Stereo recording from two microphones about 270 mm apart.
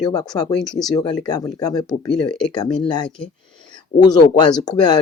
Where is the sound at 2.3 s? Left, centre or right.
Centre.